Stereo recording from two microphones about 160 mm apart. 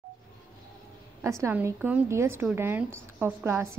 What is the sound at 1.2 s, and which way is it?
A woman's voice, 15° right (ahead or behind).